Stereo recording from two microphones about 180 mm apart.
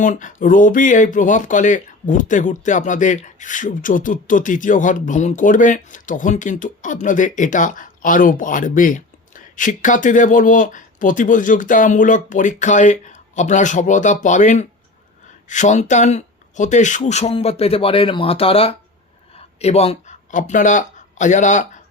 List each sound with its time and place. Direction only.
0.0 s speech: 45° left (ahead or behind)